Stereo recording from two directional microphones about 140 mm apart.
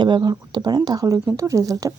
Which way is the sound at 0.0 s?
30° right (ahead or behind).